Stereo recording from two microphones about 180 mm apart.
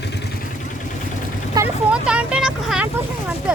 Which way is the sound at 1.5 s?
10° right (ahead or behind).